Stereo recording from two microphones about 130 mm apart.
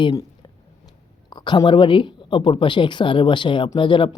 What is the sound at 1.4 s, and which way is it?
Speech, 35° left (ahead or behind).